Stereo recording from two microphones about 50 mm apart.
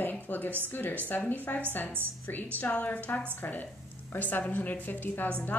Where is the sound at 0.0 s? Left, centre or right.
Left.